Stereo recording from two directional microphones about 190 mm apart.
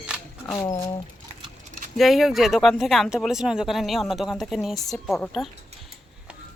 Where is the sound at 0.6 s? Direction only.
20° left (ahead or behind).